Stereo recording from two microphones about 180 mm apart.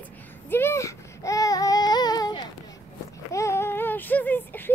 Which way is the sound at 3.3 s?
15° left (ahead or behind).